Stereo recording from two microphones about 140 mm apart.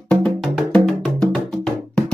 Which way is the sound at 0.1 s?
5° left (ahead or behind).